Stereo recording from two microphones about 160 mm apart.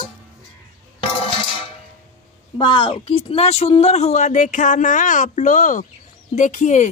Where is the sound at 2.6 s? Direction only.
30° left (ahead or behind); by 6.8 s 50° left (ahead or behind).